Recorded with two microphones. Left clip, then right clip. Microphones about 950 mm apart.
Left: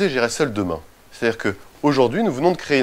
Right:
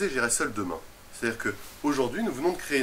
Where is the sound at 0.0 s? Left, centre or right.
Left.